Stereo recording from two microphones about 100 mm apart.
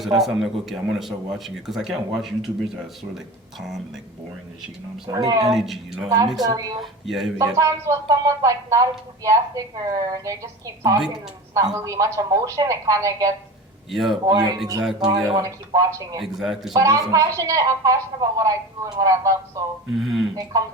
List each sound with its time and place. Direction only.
0.2 s speech: 5° right (ahead or behind)
5.0 s a woman's voice: 40° right (ahead or behind)
5.5 s speech: 5° right (ahead or behind)
6.4 s a woman's voice: 35° right (ahead or behind)
7.0 s speech: centre (ahead or behind)
7.3 s a woman's voice: 35° right (ahead or behind)
13.9 s speech: 5° right (ahead or behind)
14.3 s a woman's voice: 40° right (ahead or behind)
16.2 s speech: 5° right (ahead or behind)
16.7 s a woman's voice: 35° right (ahead or behind)
19.9 s speech: 5° right (ahead or behind)
20.3 s a woman's voice: 35° right (ahead or behind)